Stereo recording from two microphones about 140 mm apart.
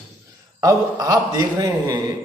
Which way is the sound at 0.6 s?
25° right (ahead or behind).